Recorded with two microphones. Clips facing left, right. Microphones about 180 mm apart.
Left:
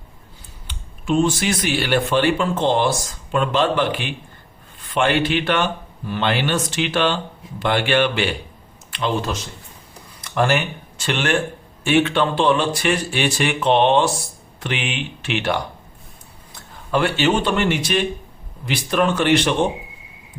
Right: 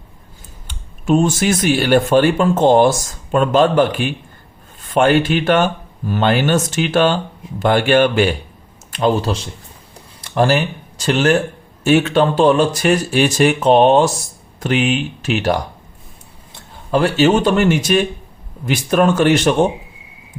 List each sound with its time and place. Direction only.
0.7 s speech: 45° right (ahead or behind)
10.2 s speech: 35° right (ahead or behind)